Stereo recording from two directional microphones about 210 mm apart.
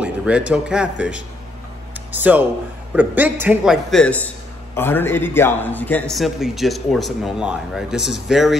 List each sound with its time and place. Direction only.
0.0 s a man's voice: 5° right (ahead or behind)